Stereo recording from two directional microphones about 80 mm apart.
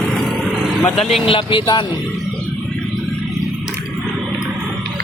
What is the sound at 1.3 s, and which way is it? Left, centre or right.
Speech, left.